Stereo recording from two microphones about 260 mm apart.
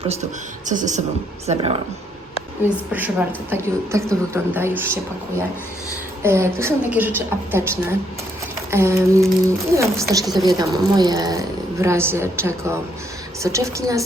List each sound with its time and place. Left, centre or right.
0.7 s a woman's voice: right
2.6 s a woman's voice: centre
6.2 s a woman's voice: centre
10.3 s speech: centre
10.6 s a woman's voice: centre